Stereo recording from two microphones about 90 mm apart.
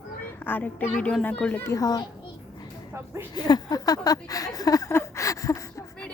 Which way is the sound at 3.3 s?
50° left (ahead or behind).